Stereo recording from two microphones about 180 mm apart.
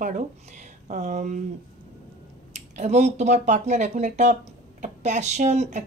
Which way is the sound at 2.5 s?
40° right (ahead or behind).